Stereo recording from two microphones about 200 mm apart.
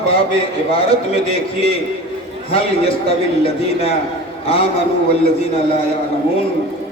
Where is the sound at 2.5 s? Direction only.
30° left (ahead or behind).